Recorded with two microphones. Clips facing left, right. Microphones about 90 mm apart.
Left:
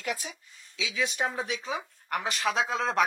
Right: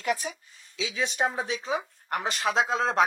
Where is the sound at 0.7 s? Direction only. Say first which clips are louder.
Right 2 dB; 30° right (ahead or behind).